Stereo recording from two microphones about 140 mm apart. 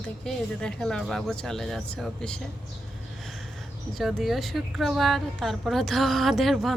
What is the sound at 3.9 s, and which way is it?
Speech, centre (ahead or behind).